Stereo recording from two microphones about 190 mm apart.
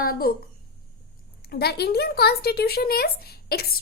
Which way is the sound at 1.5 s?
55° left (ahead or behind).